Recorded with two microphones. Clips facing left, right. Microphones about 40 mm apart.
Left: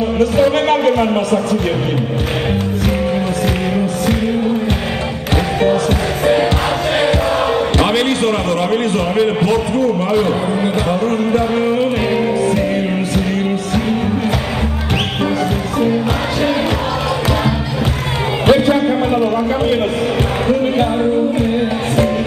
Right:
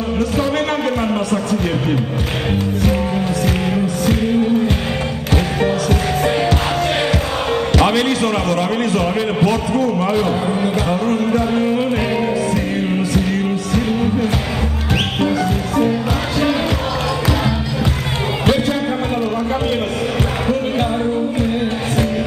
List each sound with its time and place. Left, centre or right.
3.8 s music: left
7.7 s basketball bounce: left
10.6 s music: left
18.5 s music: left